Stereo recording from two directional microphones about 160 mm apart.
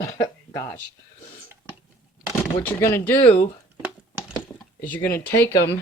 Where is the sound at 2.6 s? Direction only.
15° left (ahead or behind).